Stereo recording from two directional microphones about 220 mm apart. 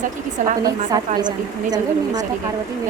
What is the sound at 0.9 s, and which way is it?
Speech, 20° right (ahead or behind).